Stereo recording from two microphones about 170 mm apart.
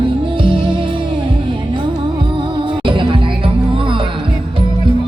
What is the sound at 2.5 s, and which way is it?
Music, 30° right (ahead or behind).